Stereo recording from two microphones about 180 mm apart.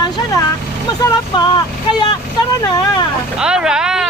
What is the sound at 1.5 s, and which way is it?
Speech, 25° left (ahead or behind).